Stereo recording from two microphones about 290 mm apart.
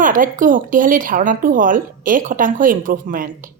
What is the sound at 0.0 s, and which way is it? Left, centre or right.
Speech, right.